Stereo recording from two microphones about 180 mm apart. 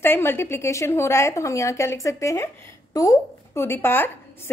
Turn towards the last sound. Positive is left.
turn(degrees=10)  # may be behind; listen again after turning